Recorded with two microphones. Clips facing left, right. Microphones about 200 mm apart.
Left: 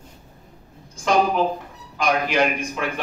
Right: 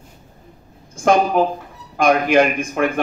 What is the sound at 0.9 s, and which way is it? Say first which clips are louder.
A woman's voice: right 4 dB; 50° right (ahead or behind).